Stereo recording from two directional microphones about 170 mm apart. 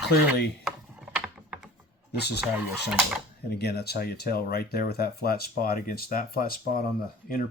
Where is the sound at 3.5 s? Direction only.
70° left (ahead or behind).